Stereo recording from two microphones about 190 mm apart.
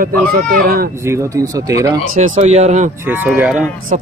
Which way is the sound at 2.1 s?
40° right (ahead or behind).